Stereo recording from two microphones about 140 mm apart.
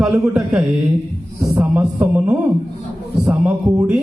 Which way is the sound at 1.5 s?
10° right (ahead or behind).